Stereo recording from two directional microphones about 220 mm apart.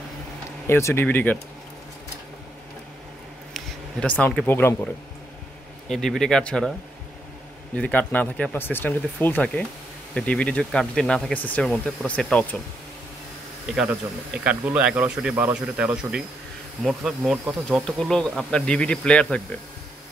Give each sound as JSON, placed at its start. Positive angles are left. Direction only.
{"t": 0.7, "sound": "speech", "side_deg": 10}
{"t": 3.5, "sound": "speech", "side_deg": 5}
{"t": 5.9, "sound": "speech", "side_deg": 0}
{"t": 7.7, "sound": "speech", "side_deg": 5}
{"t": 13.7, "sound": "speech", "side_deg": -5}